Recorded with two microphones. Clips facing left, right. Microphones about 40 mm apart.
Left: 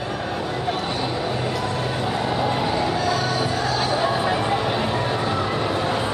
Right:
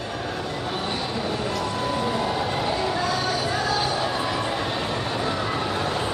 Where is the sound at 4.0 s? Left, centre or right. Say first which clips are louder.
Left 4 dB; centre.